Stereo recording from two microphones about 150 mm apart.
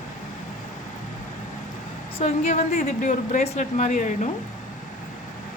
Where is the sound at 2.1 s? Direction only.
50° left (ahead or behind).